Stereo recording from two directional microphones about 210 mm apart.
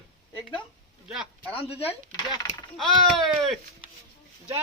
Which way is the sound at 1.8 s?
15° left (ahead or behind).